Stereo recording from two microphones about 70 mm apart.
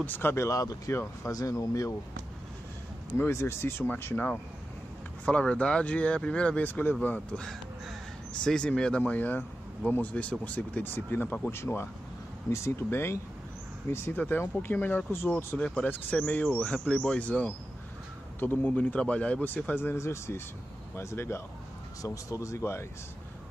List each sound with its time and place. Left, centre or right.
0.0 s speech: left
0.5 s speech: left
3.2 s a man's voice: left
5.2 s speech: centre
8.5 s speech: centre
10.4 s a man's voice: left
14.1 s a man's voice: left
15.6 s speech: centre
15.9 s a man's voice: left
22.0 s speech: left